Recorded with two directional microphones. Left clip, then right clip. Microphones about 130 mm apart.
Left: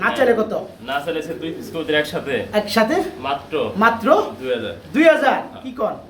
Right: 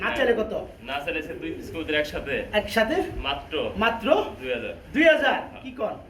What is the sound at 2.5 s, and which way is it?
Speech, centre (ahead or behind).